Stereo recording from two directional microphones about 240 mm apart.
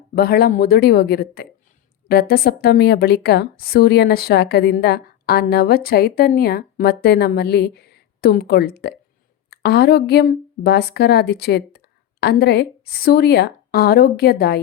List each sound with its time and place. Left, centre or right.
0.1 s a woman's voice: left